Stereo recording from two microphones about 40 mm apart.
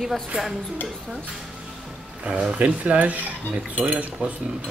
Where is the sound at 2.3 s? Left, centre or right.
Right.